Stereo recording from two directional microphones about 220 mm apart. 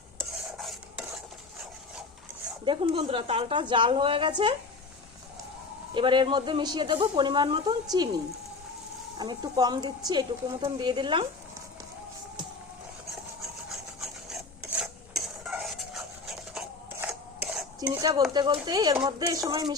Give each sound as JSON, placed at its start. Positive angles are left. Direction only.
{"t": 0.2, "sound": "stir", "side_deg": 0}
{"t": 2.6, "sound": "a woman's voice", "side_deg": -25}
{"t": 5.9, "sound": "a woman's voice", "side_deg": -20}
{"t": 13.7, "sound": "rub", "side_deg": 0}
{"t": 14.7, "sound": "stir", "side_deg": 0}
{"t": 17.7, "sound": "dishes", "side_deg": -15}
{"t": 18.3, "sound": "a woman's voice", "side_deg": -20}